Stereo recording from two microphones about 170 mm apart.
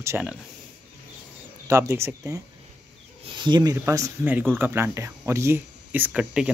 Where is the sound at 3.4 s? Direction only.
25° right (ahead or behind).